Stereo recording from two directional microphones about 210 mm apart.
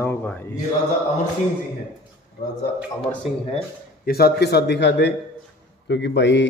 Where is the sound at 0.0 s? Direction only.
10° left (ahead or behind).